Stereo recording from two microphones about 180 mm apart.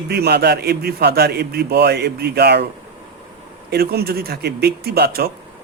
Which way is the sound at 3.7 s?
60° right (ahead or behind).